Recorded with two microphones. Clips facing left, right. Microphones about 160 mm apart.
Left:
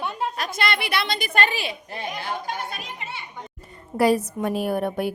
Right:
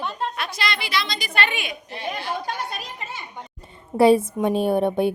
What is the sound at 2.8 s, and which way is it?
Children playing, 40° right (ahead or behind).